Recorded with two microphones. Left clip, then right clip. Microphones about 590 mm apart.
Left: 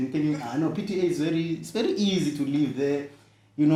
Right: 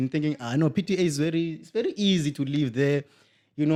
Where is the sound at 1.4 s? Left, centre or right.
Right.